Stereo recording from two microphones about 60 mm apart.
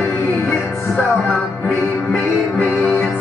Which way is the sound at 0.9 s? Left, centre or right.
Centre.